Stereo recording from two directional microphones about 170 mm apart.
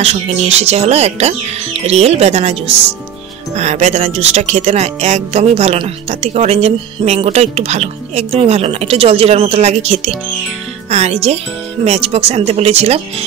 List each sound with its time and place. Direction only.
0.0 s speech: 35° right (ahead or behind)